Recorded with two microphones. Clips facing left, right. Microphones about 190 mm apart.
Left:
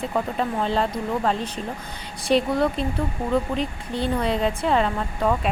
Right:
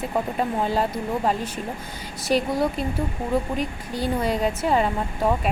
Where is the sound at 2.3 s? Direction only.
Centre (ahead or behind).